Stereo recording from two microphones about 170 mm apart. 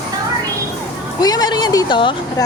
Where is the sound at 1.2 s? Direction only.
20° left (ahead or behind).